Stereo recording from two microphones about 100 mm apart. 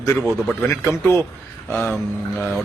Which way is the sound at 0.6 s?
20° left (ahead or behind).